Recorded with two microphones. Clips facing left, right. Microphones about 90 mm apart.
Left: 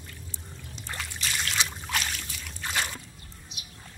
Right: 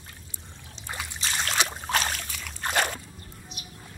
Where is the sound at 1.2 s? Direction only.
35° right (ahead or behind).